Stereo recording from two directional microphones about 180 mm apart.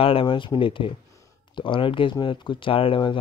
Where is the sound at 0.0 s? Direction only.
30° left (ahead or behind).